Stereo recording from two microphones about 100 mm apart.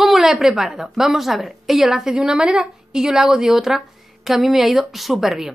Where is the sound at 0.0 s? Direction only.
5° right (ahead or behind).